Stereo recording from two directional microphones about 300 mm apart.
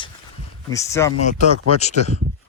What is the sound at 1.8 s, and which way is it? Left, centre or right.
Speech, left.